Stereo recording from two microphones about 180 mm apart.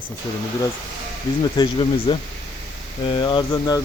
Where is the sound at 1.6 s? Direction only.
25° left (ahead or behind).